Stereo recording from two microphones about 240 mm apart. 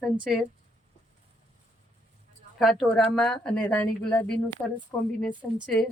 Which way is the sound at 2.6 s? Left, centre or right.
Centre.